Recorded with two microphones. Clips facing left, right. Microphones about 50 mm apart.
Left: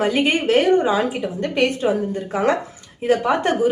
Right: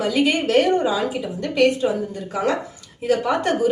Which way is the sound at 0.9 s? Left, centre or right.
Left.